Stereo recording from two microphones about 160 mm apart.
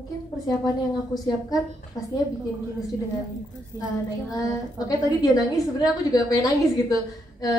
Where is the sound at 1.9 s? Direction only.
Centre (ahead or behind).